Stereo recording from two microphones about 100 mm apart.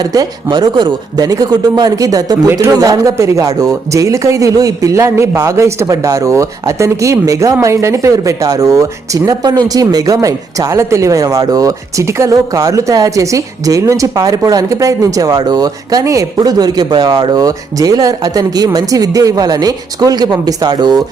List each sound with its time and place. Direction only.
0.1 s speech: 40° right (ahead or behind)